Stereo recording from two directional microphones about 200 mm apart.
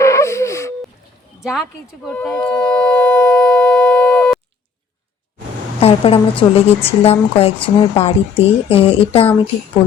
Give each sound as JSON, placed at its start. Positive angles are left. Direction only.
{"t": 0.0, "sound": "a sound", "side_deg": 15}
{"t": 1.4, "sound": "speech", "side_deg": 0}
{"t": 2.0, "sound": "shofar", "side_deg": 5}
{"t": 5.8, "sound": "a woman's voice", "side_deg": 30}